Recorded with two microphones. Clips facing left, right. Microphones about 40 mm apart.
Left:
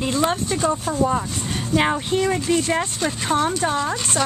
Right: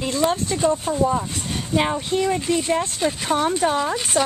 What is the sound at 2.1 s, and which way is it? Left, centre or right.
Speech, left.